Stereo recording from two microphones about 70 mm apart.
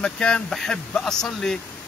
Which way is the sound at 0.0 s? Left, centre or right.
Centre.